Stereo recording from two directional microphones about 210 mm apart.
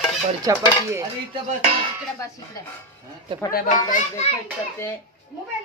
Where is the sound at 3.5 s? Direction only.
40° left (ahead or behind).